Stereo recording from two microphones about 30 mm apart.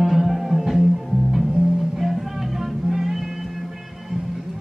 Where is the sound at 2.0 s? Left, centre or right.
Centre.